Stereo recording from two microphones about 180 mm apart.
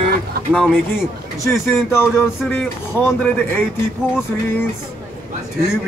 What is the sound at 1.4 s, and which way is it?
Speech, 15° left (ahead or behind).